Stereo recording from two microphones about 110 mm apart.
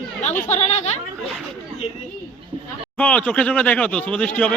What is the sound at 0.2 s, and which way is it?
Speech, 90° left.